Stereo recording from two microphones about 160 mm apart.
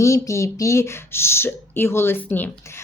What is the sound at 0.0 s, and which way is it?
Speech, 20° left (ahead or behind).